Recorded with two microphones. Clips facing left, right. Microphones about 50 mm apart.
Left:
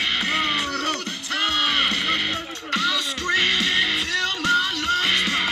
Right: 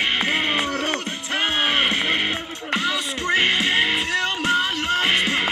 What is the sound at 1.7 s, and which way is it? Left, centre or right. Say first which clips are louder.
Music: right 2 dB; right.